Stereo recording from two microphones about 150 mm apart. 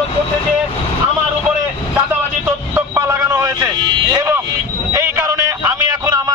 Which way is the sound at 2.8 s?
15° right (ahead or behind).